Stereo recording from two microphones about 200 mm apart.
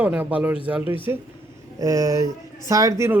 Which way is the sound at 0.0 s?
5° right (ahead or behind).